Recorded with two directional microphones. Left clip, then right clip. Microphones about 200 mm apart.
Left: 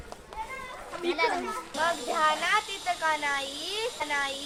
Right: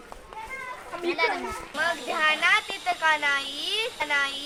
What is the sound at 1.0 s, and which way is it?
Speech, 25° right (ahead or behind).